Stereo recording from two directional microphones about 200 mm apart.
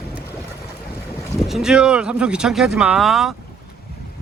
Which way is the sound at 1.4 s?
Centre (ahead or behind).